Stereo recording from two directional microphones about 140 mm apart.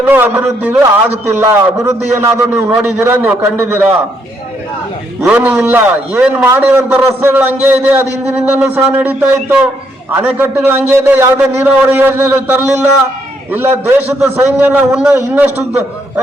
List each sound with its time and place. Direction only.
0.1 s a man's voice: 10° right (ahead or behind)
5.2 s a man's voice: 10° right (ahead or behind)